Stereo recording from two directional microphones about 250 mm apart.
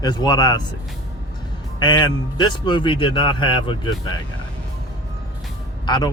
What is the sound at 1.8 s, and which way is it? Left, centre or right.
A man's voice, centre.